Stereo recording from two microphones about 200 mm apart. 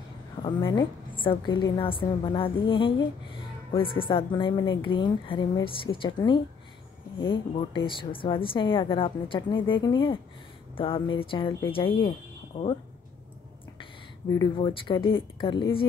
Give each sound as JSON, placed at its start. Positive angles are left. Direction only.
{"t": 0.4, "sound": "a woman's voice", "side_deg": 25}
{"t": 14.4, "sound": "a woman's voice", "side_deg": 25}